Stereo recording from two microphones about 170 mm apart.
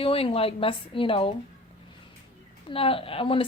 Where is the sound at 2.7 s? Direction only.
35° left (ahead or behind).